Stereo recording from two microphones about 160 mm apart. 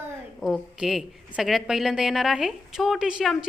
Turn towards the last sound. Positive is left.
turn(degrees=0)  # may be behind; listen again after turning